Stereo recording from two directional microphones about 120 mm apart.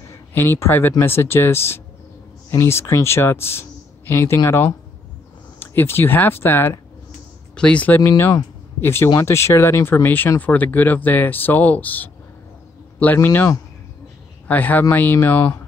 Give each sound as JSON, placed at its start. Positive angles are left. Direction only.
{"t": 0.3, "sound": "speech", "side_deg": 20}
{"t": 5.6, "sound": "speech", "side_deg": 20}
{"t": 8.0, "sound": "speech", "side_deg": 25}
{"t": 14.5, "sound": "speech", "side_deg": 15}